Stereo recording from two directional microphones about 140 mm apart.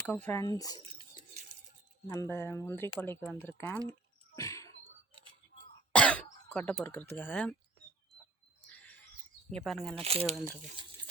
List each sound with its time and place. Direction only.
0.1 s speech: 15° left (ahead or behind)
0.4 s speech: 30° left (ahead or behind)
2.0 s speech: 15° left (ahead or behind)
4.4 s a sound: 20° left (ahead or behind)
5.9 s throat clearing: 10° left (ahead or behind)
9.6 s speech: centre (ahead or behind)
9.9 s speech: 45° right (ahead or behind)